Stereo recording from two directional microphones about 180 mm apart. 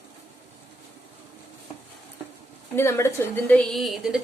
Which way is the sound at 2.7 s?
15° left (ahead or behind).